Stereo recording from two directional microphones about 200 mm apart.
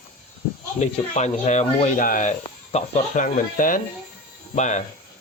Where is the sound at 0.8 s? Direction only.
35° left (ahead or behind).